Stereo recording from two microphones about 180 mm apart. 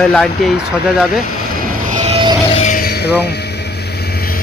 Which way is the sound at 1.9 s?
40° right (ahead or behind).